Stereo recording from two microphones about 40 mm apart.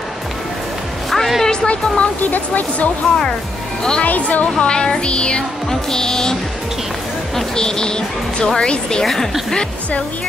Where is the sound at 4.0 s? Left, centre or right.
Left.